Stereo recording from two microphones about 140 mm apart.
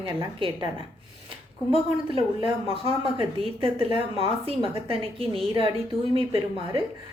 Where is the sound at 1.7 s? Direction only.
40° right (ahead or behind).